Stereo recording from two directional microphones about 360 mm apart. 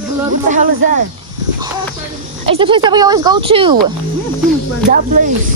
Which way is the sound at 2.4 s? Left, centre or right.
Centre.